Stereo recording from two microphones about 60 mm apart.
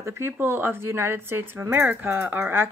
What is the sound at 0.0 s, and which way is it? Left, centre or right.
Speech, right.